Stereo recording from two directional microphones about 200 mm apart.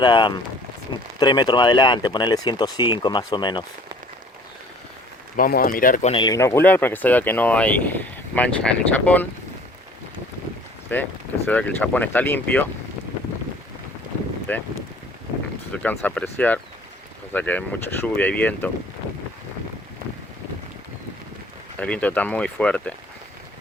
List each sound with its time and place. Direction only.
0.0 s speech: 25° left (ahead or behind)
5.4 s speech: 45° left (ahead or behind)
6.1 s speech: 20° left (ahead or behind)
10.9 s speech: 10° left (ahead or behind)
14.5 s speech: 10° left (ahead or behind)
15.7 s speech: 5° left (ahead or behind)
21.8 s speech: 5° left (ahead or behind)